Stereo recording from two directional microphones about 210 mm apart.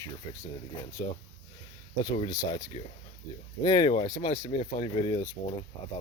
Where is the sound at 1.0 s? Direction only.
20° left (ahead or behind).